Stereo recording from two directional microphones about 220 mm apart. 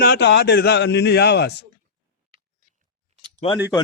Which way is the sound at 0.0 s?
50° left (ahead or behind).